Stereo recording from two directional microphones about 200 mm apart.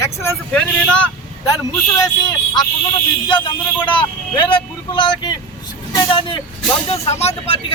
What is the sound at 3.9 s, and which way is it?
Speech, 25° left (ahead or behind).